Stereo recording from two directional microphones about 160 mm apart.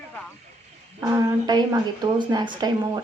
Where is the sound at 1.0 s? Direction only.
20° right (ahead or behind).